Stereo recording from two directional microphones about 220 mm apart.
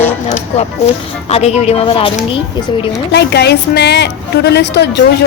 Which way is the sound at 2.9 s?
50° left (ahead or behind).